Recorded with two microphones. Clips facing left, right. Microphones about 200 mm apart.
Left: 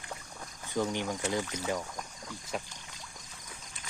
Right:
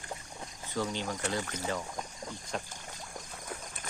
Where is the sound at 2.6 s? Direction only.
45° right (ahead or behind).